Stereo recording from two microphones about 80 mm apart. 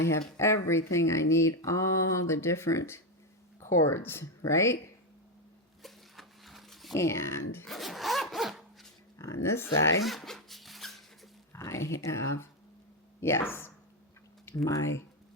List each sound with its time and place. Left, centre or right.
0.0 s speech: left
5.8 s a sound: centre
6.9 s speech: left
7.7 s zipper: centre
9.1 s speech: left
10.0 s dog: centre
11.5 s speech: left